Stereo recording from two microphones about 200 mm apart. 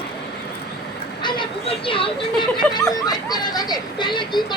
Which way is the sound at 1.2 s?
25° left (ahead or behind).